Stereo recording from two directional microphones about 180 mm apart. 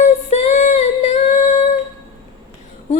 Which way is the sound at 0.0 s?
35° left (ahead or behind).